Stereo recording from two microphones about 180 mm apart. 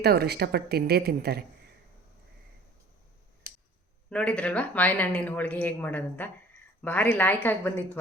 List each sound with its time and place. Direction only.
0.0 s speech: 60° right (ahead or behind)
4.1 s speech: 5° left (ahead or behind)